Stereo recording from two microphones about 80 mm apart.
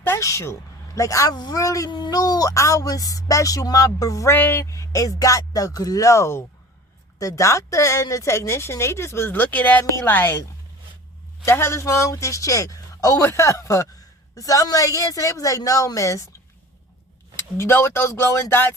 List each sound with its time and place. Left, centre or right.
0.2 s speech: left
1.3 s speech: left
1.5 s speech: left
1.9 s speech: left
4.4 s a woman's voice: left
4.7 s a woman's voice: left
11.4 s speech: left
17.3 s speech: left